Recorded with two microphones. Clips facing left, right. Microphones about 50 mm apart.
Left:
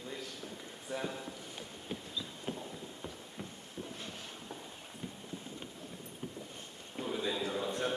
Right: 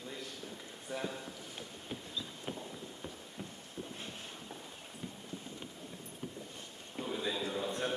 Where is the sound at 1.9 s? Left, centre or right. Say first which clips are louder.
Left 2 dB; centre.